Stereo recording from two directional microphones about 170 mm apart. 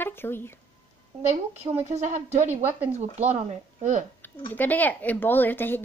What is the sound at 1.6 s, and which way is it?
Speech, 40° right (ahead or behind).